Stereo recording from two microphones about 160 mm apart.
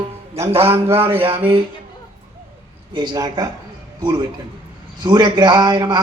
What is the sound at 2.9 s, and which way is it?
Speech, 30° right (ahead or behind).